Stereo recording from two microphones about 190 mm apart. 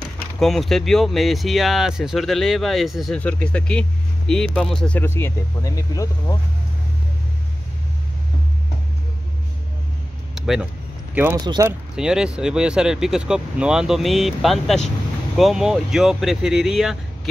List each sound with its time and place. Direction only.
0.4 s speech: centre (ahead or behind); by 6.3 s 15° left (ahead or behind)
10.3 s a sound: centre (ahead or behind)
11.4 s speech: 20° right (ahead or behind)
11.9 s speech: 5° right (ahead or behind)